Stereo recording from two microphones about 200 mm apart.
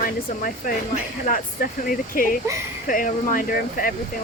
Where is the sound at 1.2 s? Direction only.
45° left (ahead or behind).